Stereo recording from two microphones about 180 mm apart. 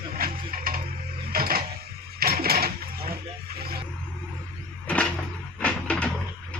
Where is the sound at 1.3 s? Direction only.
55° right (ahead or behind).